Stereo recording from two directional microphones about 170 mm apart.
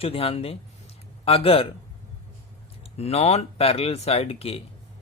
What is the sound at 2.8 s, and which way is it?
Speech, 35° left (ahead or behind).